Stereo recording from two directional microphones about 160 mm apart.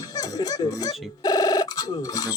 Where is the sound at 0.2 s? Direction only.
25° left (ahead or behind).